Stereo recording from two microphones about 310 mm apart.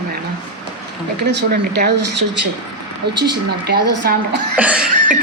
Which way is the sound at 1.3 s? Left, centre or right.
Right.